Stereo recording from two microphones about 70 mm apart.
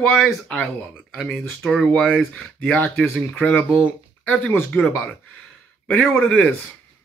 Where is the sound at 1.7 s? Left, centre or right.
Centre.